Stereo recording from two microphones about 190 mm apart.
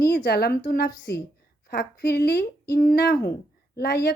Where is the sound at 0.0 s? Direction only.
55° left (ahead or behind).